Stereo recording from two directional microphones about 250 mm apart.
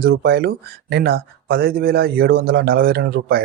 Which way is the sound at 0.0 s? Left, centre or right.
Right.